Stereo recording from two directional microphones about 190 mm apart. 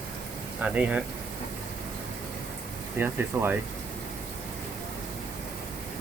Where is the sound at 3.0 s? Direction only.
10° right (ahead or behind).